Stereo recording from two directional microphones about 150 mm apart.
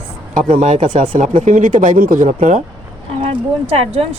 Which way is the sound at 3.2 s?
40° right (ahead or behind).